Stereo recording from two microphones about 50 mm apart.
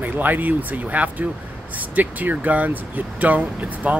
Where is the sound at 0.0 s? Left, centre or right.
Right.